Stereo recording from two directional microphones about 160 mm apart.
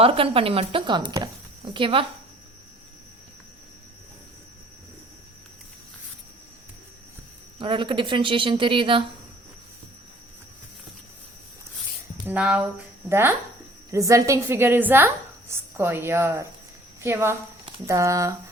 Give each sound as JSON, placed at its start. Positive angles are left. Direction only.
{"t": 0.0, "sound": "speech", "side_deg": -35}
{"t": 7.6, "sound": "speech", "side_deg": -30}
{"t": 12.2, "sound": "a woman's voice", "side_deg": -10}